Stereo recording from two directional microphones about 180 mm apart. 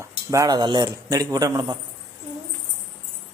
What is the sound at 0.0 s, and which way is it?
A man's voice, 20° right (ahead or behind).